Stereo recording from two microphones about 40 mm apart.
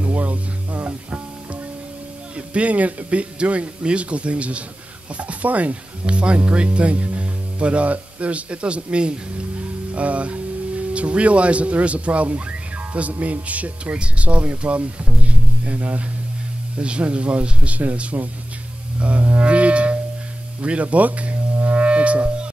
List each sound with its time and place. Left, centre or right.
0.0 s music: right
2.3 s speech: right
18.9 s music: right
20.8 s speech: right
21.6 s music: right